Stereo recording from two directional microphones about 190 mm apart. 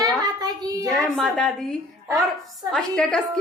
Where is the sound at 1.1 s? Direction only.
Centre (ahead or behind).